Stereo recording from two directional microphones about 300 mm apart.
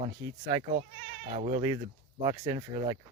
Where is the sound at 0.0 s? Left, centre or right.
Centre.